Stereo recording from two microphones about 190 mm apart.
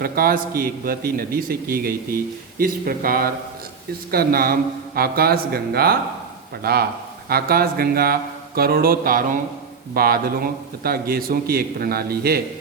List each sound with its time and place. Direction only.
0.0 s a man's voice: 50° right (ahead or behind)